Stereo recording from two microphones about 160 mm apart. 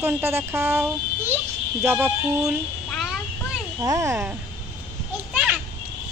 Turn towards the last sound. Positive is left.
turn(degrees=-5)  # may be behind; listen again after turning